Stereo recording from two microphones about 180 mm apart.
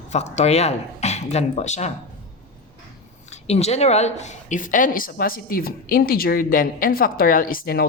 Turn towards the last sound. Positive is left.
turn(degrees=55)  # may be behind; listen again after turning